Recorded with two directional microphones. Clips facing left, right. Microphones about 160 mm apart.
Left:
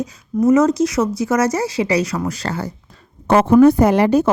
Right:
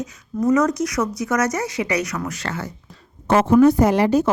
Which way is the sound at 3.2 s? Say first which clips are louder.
Left 3 dB; 60° left (ahead or behind).